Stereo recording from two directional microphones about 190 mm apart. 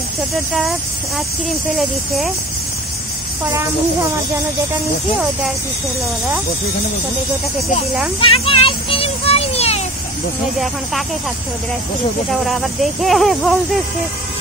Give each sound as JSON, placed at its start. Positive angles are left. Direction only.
{"t": 0.5, "sound": "speech", "side_deg": 0}
{"t": 1.8, "sound": "speech", "side_deg": 0}
{"t": 8.2, "sound": "a sound", "side_deg": 30}
{"t": 12.4, "sound": "speech", "side_deg": 0}